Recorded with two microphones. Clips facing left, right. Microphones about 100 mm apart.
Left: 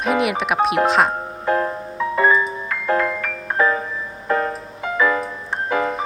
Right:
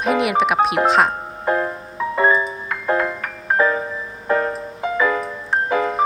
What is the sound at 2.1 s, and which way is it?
Music, 30° right (ahead or behind).